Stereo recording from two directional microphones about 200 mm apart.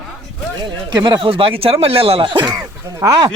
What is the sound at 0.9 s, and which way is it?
Speech, 20° right (ahead or behind).